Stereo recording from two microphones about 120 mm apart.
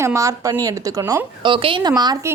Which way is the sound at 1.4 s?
45° right (ahead or behind).